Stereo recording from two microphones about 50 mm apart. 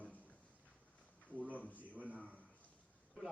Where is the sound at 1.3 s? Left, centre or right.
Right.